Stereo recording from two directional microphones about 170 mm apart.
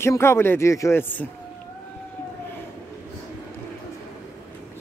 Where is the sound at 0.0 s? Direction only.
15° left (ahead or behind).